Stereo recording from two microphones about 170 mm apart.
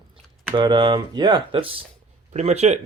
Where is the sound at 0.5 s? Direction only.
25° right (ahead or behind).